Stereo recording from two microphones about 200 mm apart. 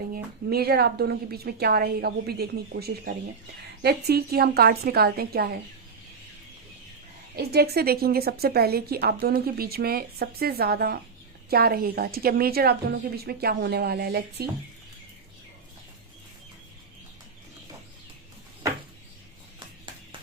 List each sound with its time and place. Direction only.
0.1 s speech: 50° right (ahead or behind)
7.3 s speech: 50° right (ahead or behind)